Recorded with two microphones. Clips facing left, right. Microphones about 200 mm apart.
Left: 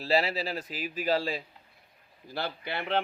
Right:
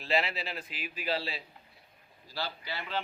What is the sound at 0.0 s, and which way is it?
Speech, 35° left (ahead or behind).